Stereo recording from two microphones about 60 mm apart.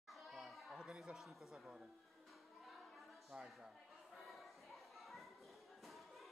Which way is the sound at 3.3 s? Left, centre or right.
Centre.